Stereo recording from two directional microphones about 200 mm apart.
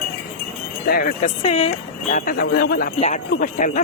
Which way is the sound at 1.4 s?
30° left (ahead or behind).